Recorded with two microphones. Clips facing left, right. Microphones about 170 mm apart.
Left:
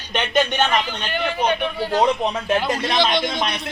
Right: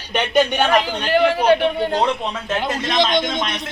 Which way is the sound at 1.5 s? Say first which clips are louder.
Right 7 dB; 70° right (ahead or behind).